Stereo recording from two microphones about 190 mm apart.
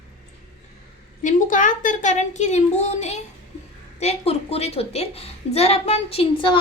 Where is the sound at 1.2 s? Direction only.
40° left (ahead or behind).